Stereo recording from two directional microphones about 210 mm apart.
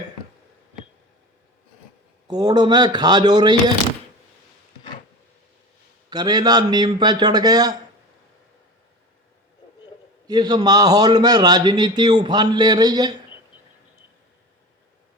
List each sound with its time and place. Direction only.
2.2 s a man's voice: 20° right (ahead or behind)
6.1 s a man's voice: 20° right (ahead or behind)
10.2 s a man's voice: 20° right (ahead or behind)